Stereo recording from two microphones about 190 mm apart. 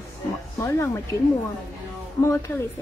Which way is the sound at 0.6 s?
15° left (ahead or behind).